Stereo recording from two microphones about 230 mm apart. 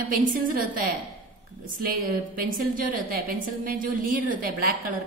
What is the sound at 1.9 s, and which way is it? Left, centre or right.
A woman's voice, right.